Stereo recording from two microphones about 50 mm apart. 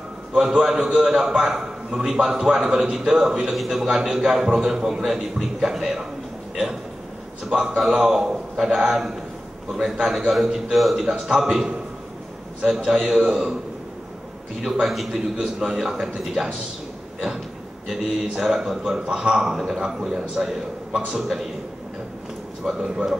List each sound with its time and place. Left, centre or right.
0.3 s a man's voice: centre
14.6 s a man's voice: centre
18.3 s a man's voice: centre
22.7 s a man's voice: centre